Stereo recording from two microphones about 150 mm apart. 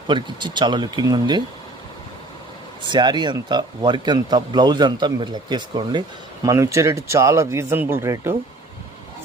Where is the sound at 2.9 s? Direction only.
30° right (ahead or behind).